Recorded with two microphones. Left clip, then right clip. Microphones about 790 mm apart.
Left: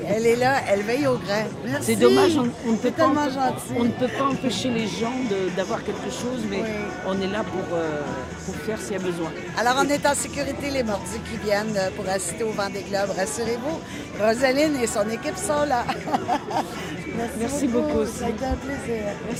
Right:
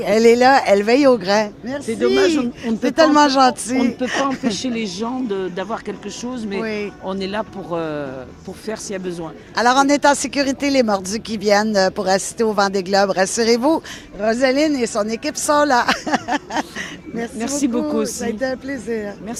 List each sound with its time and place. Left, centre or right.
0.1 s speech: right
1.9 s speech: right
3.0 s speech: right
9.6 s speech: right
14.4 s speech: right
17.4 s speech: right